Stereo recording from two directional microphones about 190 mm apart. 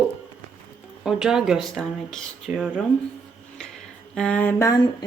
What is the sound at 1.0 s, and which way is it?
A woman's voice, 5° right (ahead or behind).